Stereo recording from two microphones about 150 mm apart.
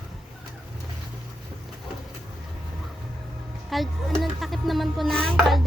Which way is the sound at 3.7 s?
Centre (ahead or behind).